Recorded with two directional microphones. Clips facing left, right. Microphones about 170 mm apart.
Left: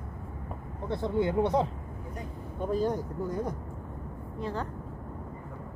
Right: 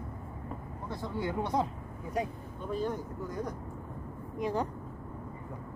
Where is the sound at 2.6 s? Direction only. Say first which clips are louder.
Left 5 dB; 40° left (ahead or behind).